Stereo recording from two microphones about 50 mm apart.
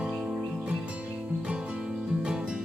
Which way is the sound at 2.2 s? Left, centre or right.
Centre.